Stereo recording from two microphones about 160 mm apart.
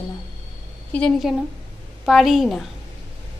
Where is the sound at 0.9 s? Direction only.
5° left (ahead or behind).